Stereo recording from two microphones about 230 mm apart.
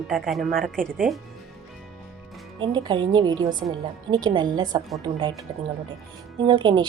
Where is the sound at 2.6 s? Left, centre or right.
Centre.